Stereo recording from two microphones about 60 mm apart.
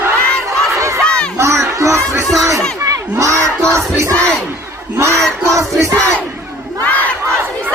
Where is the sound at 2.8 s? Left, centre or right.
Right.